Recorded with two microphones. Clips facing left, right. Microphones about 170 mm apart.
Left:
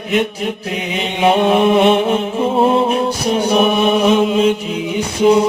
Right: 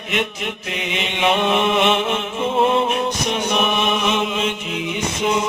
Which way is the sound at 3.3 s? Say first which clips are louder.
Left 9 dB; 35° left (ahead or behind).